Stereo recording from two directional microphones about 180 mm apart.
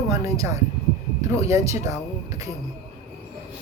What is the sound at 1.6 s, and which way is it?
Speech, 15° right (ahead or behind).